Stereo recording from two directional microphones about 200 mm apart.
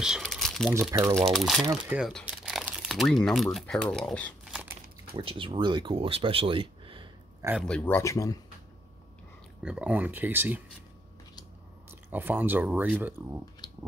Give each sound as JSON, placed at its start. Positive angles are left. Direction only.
{"t": 0.0, "sound": "crumpling", "side_deg": 0}
{"t": 0.8, "sound": "speech", "side_deg": 0}
{"t": 1.6, "sound": "speech", "side_deg": -15}
{"t": 2.0, "sound": "speech", "side_deg": 0}
{"t": 5.1, "sound": "speech", "side_deg": -25}
{"t": 7.6, "sound": "speech", "side_deg": 5}
{"t": 9.6, "sound": "speech", "side_deg": -5}
{"t": 11.9, "sound": "speech", "side_deg": -10}